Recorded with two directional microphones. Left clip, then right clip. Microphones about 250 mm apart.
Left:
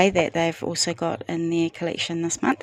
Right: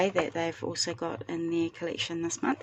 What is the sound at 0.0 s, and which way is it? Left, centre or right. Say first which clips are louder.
Speech: left 8 dB; left.